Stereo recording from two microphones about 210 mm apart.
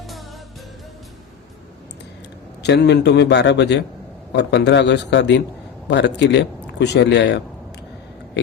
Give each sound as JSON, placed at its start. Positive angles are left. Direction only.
{"t": 2.6, "sound": "a man's voice", "side_deg": 55}